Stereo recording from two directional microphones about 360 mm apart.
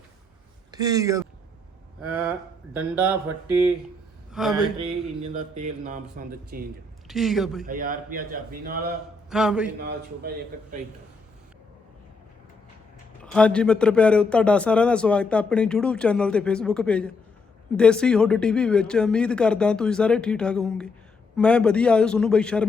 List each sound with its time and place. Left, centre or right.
0.7 s speech: centre
2.7 s a man's voice: centre
4.3 s a sound: centre
4.8 s a sound: right
5.5 s a man's voice: centre
7.1 s a man's voice: centre
7.7 s a man's voice: right
9.3 s a man's voice: centre
9.8 s a man's voice: right
13.2 s a man's voice: centre